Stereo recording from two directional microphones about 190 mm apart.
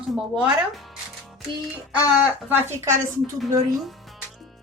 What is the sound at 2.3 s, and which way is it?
Speech, 10° right (ahead or behind).